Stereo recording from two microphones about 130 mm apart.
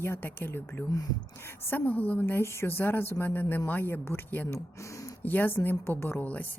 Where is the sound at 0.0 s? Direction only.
15° left (ahead or behind).